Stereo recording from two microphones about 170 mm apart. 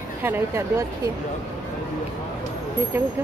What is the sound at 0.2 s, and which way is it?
Speech, 15° right (ahead or behind).